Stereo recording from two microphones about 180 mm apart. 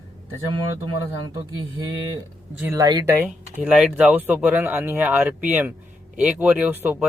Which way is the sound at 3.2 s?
5° right (ahead or behind).